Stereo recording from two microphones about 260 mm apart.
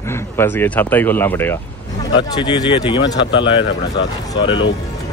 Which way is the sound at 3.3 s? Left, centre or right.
Left.